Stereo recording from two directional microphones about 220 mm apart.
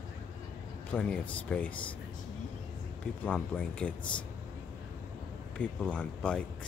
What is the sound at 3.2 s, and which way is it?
Speech, 5° left (ahead or behind).